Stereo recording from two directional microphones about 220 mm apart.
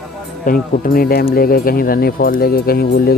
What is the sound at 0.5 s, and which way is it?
Speech, 40° left (ahead or behind).